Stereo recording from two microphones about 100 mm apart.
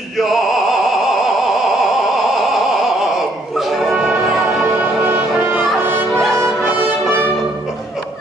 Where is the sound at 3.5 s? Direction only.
Centre (ahead or behind).